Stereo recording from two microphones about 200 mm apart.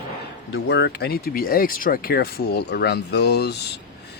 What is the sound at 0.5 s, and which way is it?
Speech, 60° left (ahead or behind).